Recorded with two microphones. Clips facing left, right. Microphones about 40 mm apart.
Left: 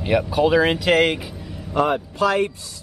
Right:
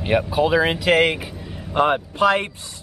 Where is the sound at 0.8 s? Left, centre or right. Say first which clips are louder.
Even; right.